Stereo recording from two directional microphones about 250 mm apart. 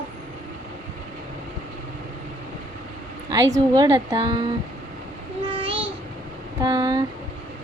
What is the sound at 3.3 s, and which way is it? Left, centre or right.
A woman's voice, centre.